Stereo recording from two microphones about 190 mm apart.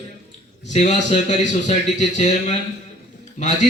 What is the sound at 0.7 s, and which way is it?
A man's voice, 35° left (ahead or behind).